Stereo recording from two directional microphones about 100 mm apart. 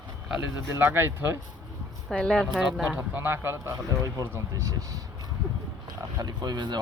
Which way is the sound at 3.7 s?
35° right (ahead or behind).